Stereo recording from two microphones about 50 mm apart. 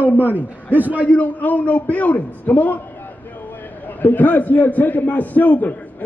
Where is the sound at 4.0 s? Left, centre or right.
Left.